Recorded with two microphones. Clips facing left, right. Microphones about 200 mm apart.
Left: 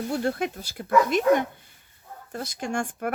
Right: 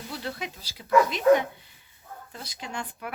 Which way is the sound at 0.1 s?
50° left (ahead or behind).